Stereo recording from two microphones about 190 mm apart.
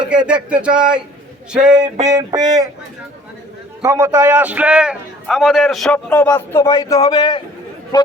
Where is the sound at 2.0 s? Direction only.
20° right (ahead or behind).